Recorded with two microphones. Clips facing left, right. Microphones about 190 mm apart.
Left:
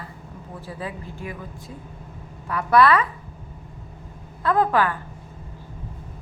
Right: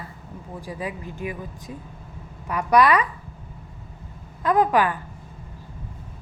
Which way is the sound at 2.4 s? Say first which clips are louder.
Left 1 dB; 15° right (ahead or behind).